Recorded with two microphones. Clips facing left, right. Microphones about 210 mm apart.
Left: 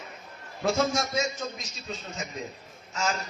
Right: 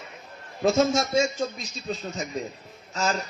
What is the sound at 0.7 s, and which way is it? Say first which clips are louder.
Speech: right 4 dB; 25° right (ahead or behind).